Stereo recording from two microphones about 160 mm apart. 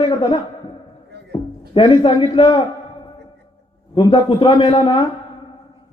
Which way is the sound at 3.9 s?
35° left (ahead or behind).